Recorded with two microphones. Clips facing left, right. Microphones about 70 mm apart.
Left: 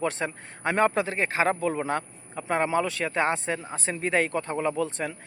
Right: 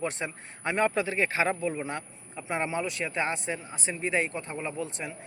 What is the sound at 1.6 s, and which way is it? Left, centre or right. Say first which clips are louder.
Speech: left 4 dB; left.